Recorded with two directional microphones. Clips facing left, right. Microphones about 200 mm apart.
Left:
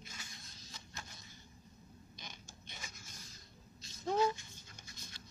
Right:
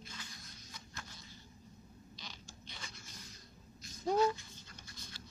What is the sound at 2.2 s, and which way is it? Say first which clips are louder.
Creak: even; 50° left (ahead or behind).